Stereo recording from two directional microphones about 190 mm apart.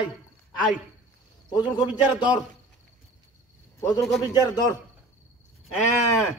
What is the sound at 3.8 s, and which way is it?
A man's voice, 15° left (ahead or behind).